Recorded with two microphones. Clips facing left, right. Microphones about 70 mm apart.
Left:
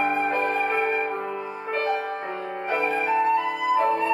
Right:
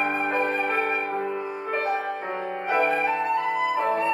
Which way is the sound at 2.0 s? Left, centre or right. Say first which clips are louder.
Right 1 dB; centre.